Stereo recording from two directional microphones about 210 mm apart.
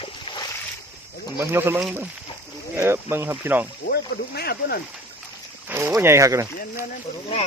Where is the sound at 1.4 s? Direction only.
10° right (ahead or behind).